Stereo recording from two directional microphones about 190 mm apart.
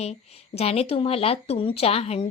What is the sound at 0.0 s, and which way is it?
A woman's voice, 35° left (ahead or behind).